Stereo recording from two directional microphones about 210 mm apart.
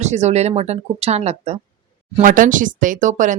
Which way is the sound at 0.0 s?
35° right (ahead or behind).